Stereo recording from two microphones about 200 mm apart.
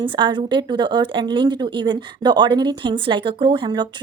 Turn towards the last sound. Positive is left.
turn(degrees=-25)  # may be behind; listen again after turning